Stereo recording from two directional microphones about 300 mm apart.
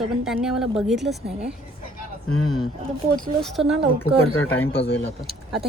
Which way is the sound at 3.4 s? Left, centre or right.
Centre.